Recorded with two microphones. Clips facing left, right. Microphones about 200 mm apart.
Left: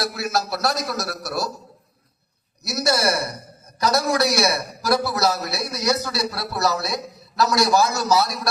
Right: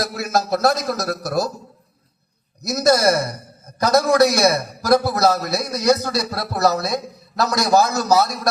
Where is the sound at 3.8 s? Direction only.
50° right (ahead or behind).